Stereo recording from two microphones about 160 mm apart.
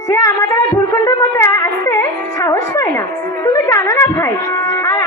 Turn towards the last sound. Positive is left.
turn(degrees=20)  # may be behind; listen again after turning